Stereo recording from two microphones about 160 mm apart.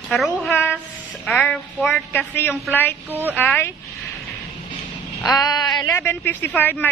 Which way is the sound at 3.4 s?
10° left (ahead or behind).